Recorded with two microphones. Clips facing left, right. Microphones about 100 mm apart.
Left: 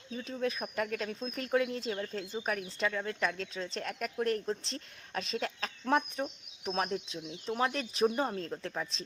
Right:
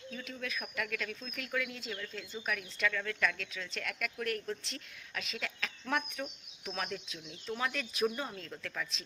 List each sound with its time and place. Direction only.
0.1 s speech: 30° left (ahead or behind)
7.6 s speech: 35° left (ahead or behind)